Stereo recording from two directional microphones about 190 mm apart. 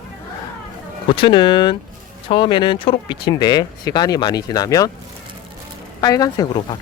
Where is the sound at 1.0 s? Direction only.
25° left (ahead or behind).